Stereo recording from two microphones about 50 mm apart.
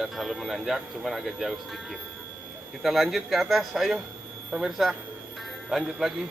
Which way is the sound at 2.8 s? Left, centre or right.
Centre.